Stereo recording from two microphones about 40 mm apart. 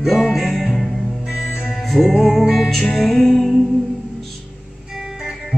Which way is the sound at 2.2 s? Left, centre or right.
Centre.